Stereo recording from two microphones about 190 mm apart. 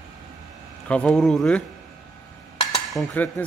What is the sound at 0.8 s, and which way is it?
Speech, 5° left (ahead or behind).